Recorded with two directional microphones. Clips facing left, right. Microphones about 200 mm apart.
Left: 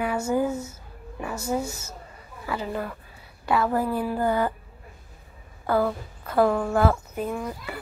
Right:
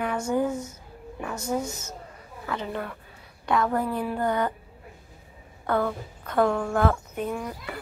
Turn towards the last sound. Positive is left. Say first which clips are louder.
# left 1 dB
turn(degrees=5)  # may be behind; listen again after turning